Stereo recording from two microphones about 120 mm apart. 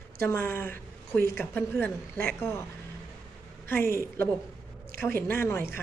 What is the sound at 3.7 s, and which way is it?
A woman's voice, 20° left (ahead or behind).